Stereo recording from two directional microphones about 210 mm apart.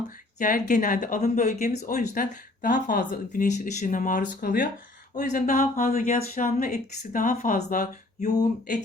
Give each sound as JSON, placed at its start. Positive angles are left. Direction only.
{"t": 0.3, "sound": "speech", "side_deg": 40}